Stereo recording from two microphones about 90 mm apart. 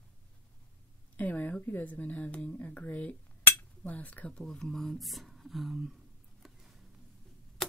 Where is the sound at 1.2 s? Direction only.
20° left (ahead or behind); by 5.9 s centre (ahead or behind).